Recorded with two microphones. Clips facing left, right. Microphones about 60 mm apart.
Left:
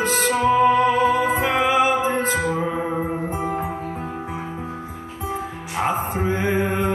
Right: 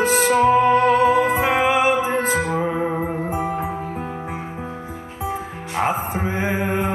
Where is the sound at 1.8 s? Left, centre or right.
Right.